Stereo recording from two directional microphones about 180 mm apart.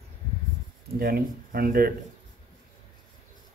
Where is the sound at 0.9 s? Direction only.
55° right (ahead or behind).